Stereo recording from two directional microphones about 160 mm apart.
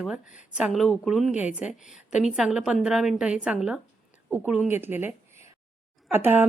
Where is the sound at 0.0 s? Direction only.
5° right (ahead or behind).